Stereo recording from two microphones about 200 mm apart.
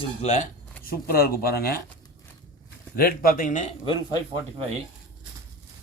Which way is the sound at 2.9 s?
45° left (ahead or behind).